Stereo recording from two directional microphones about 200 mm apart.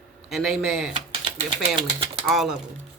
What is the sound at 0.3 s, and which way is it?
Speech, centre (ahead or behind).